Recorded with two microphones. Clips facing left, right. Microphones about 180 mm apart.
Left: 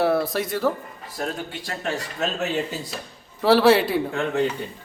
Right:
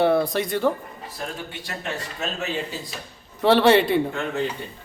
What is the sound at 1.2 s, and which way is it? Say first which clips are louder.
Speech: left 5 dB; 45° left (ahead or behind).